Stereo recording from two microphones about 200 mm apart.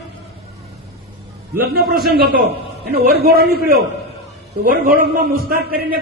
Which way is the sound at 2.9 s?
50° right (ahead or behind).